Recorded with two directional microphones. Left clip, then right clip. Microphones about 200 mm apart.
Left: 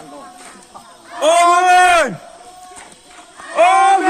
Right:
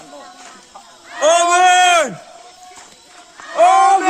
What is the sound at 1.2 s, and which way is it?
Speech, 25° right (ahead or behind).